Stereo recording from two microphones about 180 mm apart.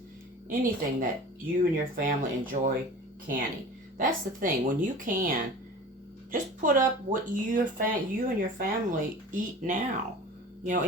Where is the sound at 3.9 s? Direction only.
50° right (ahead or behind).